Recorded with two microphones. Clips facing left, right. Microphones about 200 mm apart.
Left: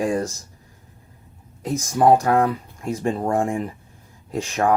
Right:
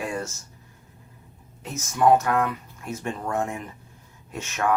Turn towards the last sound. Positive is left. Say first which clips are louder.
# left 5 dB
turn(degrees=35)  # may be behind; listen again after turning